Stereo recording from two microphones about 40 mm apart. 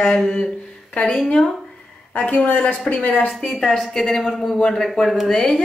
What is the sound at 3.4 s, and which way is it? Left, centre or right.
A woman's voice, centre.